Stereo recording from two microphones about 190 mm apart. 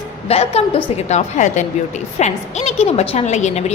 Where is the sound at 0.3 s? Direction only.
30° left (ahead or behind).